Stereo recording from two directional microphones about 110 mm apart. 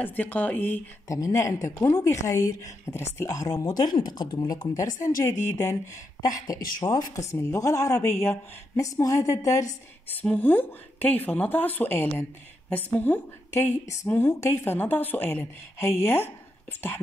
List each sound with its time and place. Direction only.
0.0 s a woman's voice: 15° left (ahead or behind)
1.0 s speech: 30° left (ahead or behind)
4.7 s speech: 30° left (ahead or behind)
10.0 s a woman's voice: 15° left (ahead or behind)
13.5 s speech: 25° left (ahead or behind)